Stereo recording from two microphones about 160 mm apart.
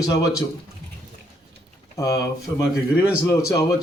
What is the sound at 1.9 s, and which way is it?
Speech, 20° left (ahead or behind).